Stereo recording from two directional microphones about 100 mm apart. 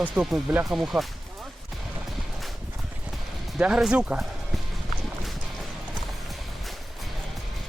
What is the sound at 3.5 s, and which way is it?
Speech, 10° right (ahead or behind).